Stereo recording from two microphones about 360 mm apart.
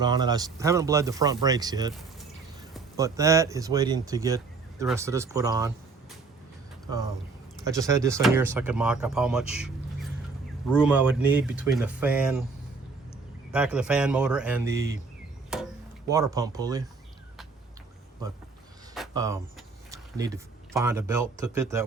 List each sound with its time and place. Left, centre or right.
0.0 s speech: centre
7.6 s speech: centre
13.5 s speech: centre
16.0 s speech: centre
18.9 s speech: centre